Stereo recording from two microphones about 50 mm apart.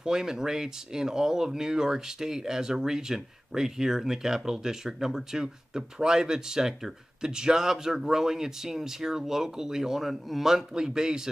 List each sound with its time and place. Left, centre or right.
0.0 s speech: centre